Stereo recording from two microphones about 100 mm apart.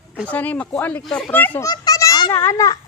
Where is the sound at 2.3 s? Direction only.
30° left (ahead or behind).